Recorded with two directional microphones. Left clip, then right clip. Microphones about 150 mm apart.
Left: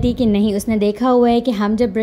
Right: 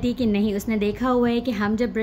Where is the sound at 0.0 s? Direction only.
40° left (ahead or behind).